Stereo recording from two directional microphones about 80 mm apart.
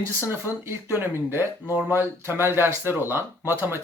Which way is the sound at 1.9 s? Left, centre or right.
Right.